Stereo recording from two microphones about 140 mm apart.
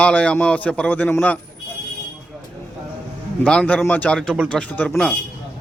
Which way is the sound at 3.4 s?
10° left (ahead or behind).